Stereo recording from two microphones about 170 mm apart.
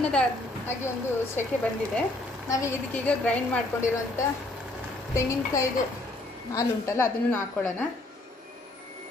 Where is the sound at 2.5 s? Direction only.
15° left (ahead or behind).